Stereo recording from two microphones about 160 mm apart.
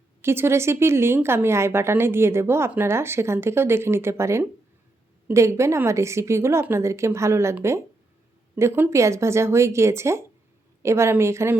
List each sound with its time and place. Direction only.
0.2 s a woman's voice: 15° right (ahead or behind)